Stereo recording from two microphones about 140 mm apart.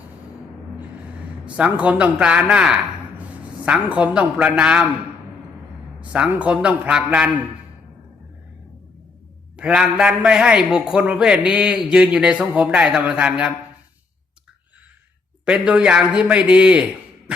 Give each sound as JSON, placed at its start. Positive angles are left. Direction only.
{"t": 1.5, "sound": "a man's voice", "side_deg": -10}
{"t": 6.0, "sound": "a man's voice", "side_deg": -10}
{"t": 9.6, "sound": "a man's voice", "side_deg": -5}
{"t": 15.4, "sound": "a man's voice", "side_deg": -10}